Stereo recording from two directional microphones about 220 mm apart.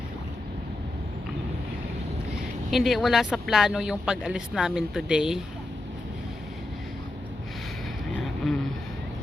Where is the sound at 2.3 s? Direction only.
Centre (ahead or behind).